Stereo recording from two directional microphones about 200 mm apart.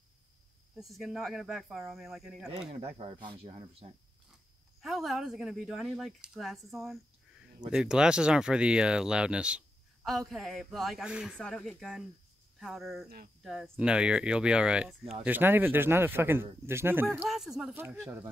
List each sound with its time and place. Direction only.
0.7 s speech: centre (ahead or behind)
2.7 s speech: 30° right (ahead or behind)
4.8 s speech: centre (ahead or behind)